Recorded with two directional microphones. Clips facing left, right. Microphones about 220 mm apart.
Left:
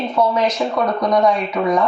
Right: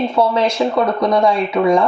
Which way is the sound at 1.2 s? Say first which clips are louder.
Left 1 dB; 30° right (ahead or behind).